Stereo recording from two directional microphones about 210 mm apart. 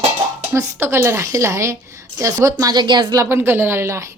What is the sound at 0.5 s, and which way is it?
Speech, 10° right (ahead or behind).